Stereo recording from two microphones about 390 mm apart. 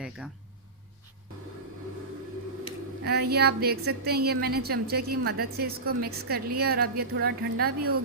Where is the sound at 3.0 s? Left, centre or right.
Right.